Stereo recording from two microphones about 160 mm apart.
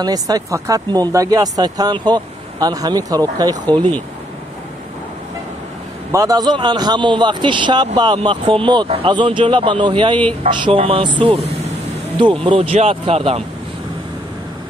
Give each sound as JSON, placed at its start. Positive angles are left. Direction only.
{"t": 0.0, "sound": "a man's voice", "side_deg": -25}
{"t": 3.7, "sound": "speech", "side_deg": 10}
{"t": 6.1, "sound": "a man's voice", "side_deg": -20}